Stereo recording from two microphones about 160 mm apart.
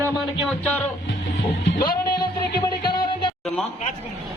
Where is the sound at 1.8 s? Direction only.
65° left (ahead or behind).